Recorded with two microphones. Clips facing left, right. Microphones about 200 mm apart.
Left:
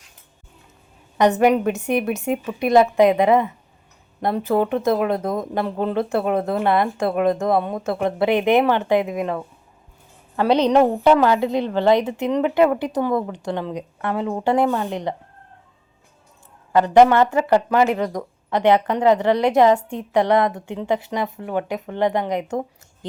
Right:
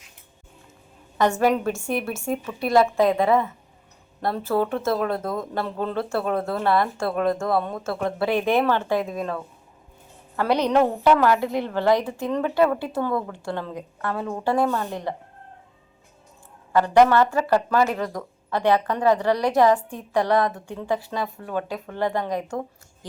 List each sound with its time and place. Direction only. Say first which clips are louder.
1.2 s speech: left 4 dB; 20° left (ahead or behind)
16.7 s speech: left 3 dB; 20° left (ahead or behind)